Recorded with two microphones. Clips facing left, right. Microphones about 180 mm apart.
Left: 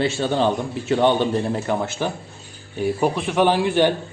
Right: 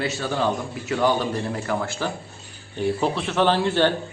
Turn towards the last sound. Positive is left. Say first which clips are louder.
# left 2 dB
turn(degrees=15)  # may be behind; listen again after turning